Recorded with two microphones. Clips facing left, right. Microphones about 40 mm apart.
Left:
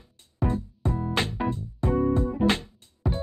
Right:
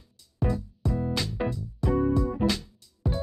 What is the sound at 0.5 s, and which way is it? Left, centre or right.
Music, left.